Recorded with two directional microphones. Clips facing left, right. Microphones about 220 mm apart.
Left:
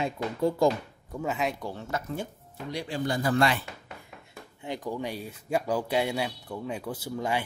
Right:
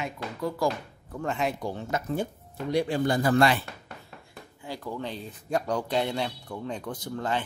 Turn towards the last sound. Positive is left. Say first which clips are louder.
# even
turn(degrees=10)  # may be behind; listen again after turning